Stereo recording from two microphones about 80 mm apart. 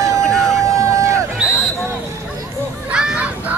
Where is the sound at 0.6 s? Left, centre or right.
Right.